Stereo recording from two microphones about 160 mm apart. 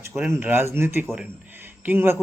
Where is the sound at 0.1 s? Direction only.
10° right (ahead or behind).